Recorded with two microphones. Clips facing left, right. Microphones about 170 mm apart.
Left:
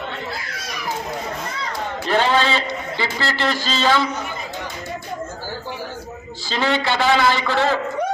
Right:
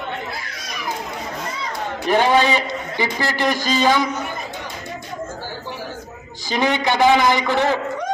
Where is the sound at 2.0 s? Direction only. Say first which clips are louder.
Right 3 dB; 15° right (ahead or behind).